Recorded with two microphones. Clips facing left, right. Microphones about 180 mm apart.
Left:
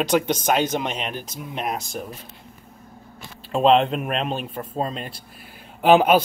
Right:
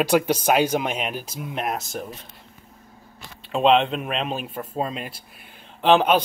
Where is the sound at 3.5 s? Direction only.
Centre (ahead or behind).